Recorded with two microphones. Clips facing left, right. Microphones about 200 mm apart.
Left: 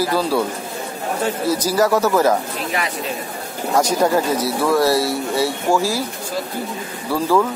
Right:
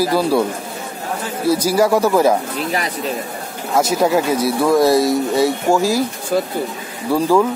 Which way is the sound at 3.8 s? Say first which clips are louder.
Right 1 dB; 5° right (ahead or behind).